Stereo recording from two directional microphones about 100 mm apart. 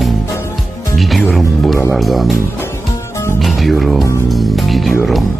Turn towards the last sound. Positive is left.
turn(degrees=0)  # may be behind; listen again after turning